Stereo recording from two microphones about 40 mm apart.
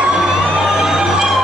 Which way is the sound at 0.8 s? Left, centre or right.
Centre.